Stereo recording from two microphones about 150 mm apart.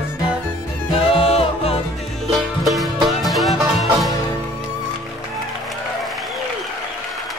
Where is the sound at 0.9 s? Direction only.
40° left (ahead or behind).